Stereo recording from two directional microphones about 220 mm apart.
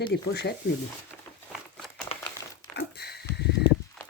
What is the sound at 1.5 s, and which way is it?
Crumpling, centre (ahead or behind).